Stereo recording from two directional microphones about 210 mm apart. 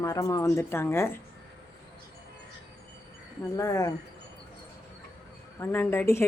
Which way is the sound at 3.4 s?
15° left (ahead or behind).